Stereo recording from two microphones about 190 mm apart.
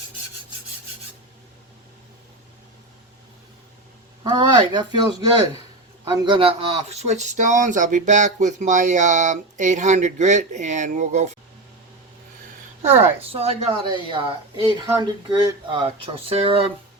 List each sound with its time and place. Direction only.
4.2 s a woman's voice: 25° right (ahead or behind)
6.1 s a woman's voice: 25° right (ahead or behind)
6.9 s speech: 35° right (ahead or behind)
12.8 s a woman's voice: 35° right (ahead or behind)